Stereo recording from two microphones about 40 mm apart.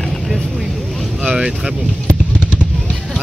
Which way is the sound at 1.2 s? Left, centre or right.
Centre.